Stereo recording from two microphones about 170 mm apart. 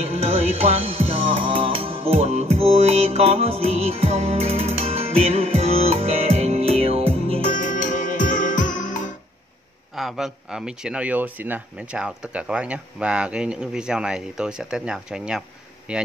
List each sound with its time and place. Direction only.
0.0 s music: 35° right (ahead or behind)
7.4 s music: 50° left (ahead or behind)
9.9 s speech: centre (ahead or behind)